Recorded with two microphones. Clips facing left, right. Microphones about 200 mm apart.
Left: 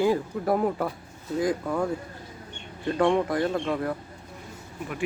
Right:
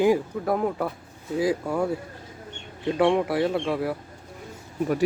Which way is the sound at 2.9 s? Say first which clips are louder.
Right 1 dB; 5° right (ahead or behind).